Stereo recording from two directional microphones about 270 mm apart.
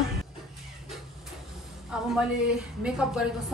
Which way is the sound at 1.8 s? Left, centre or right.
Centre.